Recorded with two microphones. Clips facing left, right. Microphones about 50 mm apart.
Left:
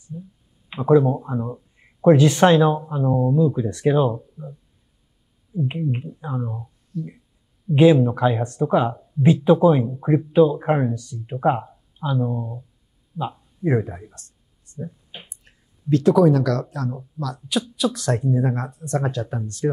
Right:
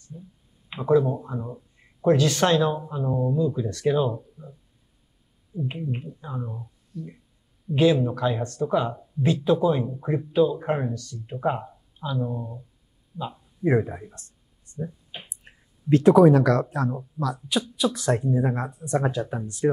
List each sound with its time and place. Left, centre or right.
0.7 s speech: centre
5.5 s speech: centre
6.2 s speech: centre
7.7 s speech: centre
13.1 s speech: centre
14.8 s a sound: centre
15.2 s speech: right
17.2 s speech: centre